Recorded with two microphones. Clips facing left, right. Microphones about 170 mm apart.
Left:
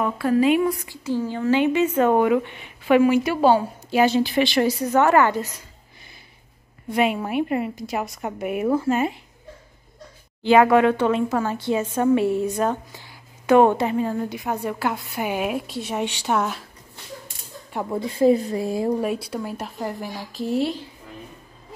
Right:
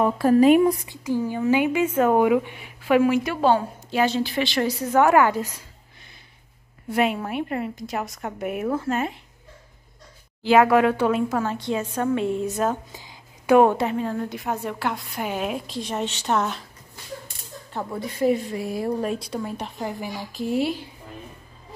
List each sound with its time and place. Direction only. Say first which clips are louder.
0.0 s speech: right 3 dB; 40° right (ahead or behind)
0.8 s a woman's voice: even; 15° right (ahead or behind); by 4.6 s 15° left (ahead or behind)
4.6 s a woman's voice: even; 5° right (ahead or behind)
6.9 s a woman's voice: left 1 dB; centre (ahead or behind)
10.4 s a woman's voice: left 1 dB; centre (ahead or behind)
12.9 s a sound: right 1 dB; 15° right (ahead or behind)
13.6 s a woman's voice: left 1 dB; centre (ahead or behind)
18.0 s a woman's voice: left 4 dB; 30° left (ahead or behind)
18.8 s a woman's voice: left 1 dB; 10° left (ahead or behind)